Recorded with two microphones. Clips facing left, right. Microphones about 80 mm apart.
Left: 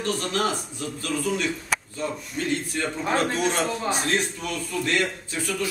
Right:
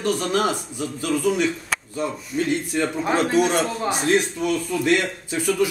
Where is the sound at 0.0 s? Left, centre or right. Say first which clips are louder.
Right 4 dB; centre.